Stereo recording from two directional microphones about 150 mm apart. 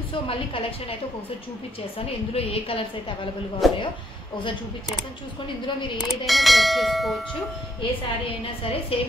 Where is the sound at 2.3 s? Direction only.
40° left (ahead or behind).